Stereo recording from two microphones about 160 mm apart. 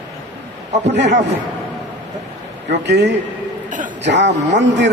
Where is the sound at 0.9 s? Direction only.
90° right.